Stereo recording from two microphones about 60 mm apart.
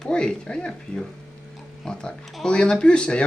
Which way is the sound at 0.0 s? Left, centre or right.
Centre.